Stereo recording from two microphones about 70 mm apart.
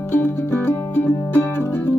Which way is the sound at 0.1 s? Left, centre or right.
Left.